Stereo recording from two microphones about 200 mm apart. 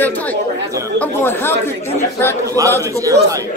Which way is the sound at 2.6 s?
15° right (ahead or behind).